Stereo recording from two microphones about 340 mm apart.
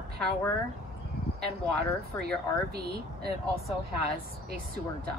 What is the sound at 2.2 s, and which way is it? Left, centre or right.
Speech, right.